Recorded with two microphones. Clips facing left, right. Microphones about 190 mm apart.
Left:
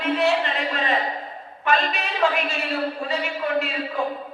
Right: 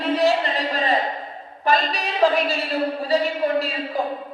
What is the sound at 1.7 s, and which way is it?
A man's voice, 35° right (ahead or behind).